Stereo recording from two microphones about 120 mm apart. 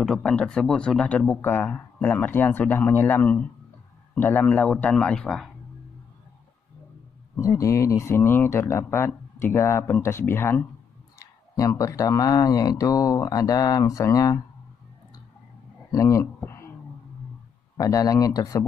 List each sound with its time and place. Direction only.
0.0 s speech: 5° left (ahead or behind)
7.3 s speech: 25° left (ahead or behind)
15.9 s speech: 25° left (ahead or behind)
17.7 s speech: 30° left (ahead or behind)